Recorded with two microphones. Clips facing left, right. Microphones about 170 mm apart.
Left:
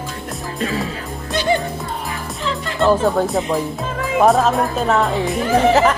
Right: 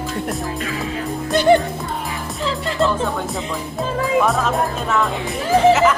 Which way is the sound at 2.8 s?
40° left (ahead or behind).